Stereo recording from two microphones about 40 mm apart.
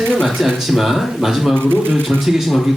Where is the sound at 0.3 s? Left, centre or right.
Centre.